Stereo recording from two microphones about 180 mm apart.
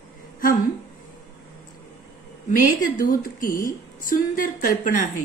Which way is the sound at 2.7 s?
50° left (ahead or behind).